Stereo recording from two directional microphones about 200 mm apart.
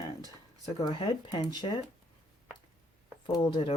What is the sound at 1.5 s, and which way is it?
Speech, 25° left (ahead or behind).